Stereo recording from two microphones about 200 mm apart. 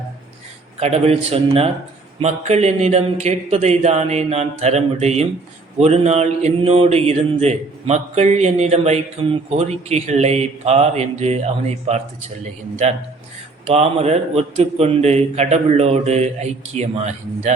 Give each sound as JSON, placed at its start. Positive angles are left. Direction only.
{"t": 0.8, "sound": "speech", "side_deg": -30}
{"t": 13.7, "sound": "speech", "side_deg": -30}